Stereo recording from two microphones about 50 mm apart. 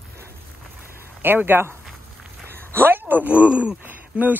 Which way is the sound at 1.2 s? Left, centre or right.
Right.